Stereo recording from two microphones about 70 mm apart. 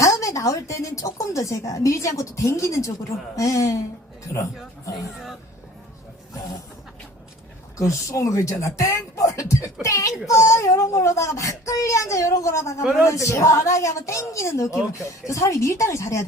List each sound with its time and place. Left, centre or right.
0.0 s speech: left
7.8 s speech: left